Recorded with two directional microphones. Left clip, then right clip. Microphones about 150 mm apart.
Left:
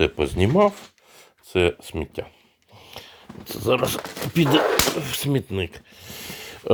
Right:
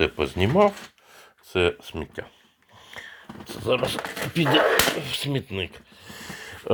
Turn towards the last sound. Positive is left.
turn(degrees=45)  # may be behind; listen again after turning